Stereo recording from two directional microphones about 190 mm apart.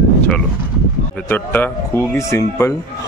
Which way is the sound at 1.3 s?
10° left (ahead or behind).